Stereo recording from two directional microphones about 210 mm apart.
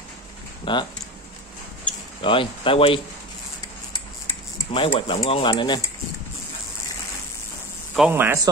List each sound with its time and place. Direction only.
0.7 s speech: 25° left (ahead or behind)
2.2 s speech: 25° left (ahead or behind)
4.7 s speech: 25° left (ahead or behind)
7.9 s speech: 5° right (ahead or behind)